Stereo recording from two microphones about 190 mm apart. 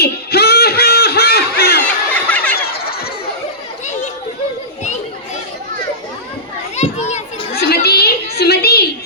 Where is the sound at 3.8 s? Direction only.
40° left (ahead or behind).